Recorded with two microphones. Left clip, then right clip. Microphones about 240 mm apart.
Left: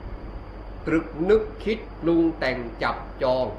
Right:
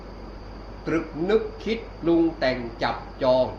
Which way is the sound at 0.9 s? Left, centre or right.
Left.